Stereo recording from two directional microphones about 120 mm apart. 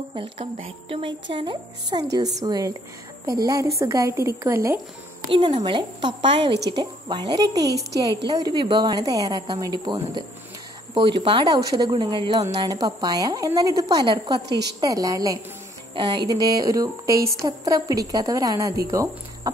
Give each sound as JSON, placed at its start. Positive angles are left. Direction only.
{"t": 0.6, "sound": "a woman's voice", "side_deg": -45}
{"t": 5.3, "sound": "speech", "side_deg": -40}
{"t": 15.9, "sound": "a woman's voice", "side_deg": -40}